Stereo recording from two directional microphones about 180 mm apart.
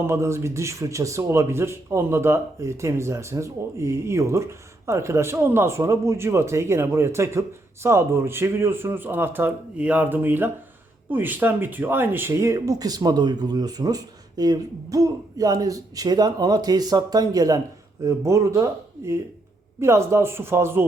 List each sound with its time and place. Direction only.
0.1 s a man's voice: 15° right (ahead or behind)